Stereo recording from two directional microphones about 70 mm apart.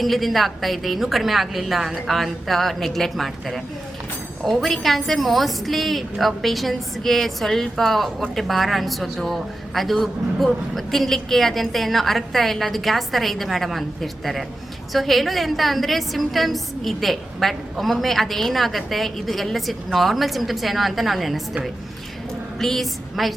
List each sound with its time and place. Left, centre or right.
0.0 s a woman's voice: centre
22.6 s a woman's voice: centre